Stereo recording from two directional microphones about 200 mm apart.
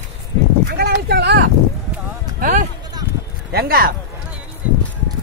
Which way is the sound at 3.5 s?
50° right (ahead or behind).